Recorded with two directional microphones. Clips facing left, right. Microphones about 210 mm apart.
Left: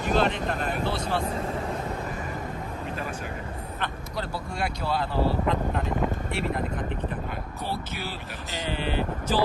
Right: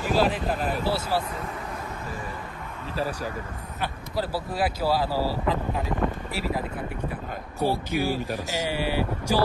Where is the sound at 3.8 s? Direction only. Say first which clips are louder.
Right 5 dB; 5° right (ahead or behind).